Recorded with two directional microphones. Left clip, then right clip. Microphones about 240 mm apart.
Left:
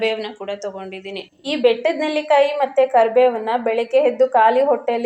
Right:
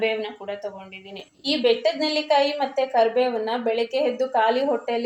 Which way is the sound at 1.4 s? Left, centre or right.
Centre.